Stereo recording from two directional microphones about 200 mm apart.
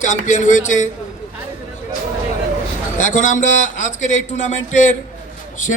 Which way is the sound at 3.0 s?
40° left (ahead or behind).